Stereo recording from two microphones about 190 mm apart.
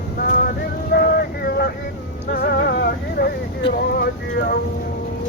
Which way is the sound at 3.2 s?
55° left (ahead or behind).